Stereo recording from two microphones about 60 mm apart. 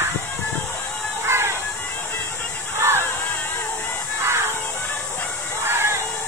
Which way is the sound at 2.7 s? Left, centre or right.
Right.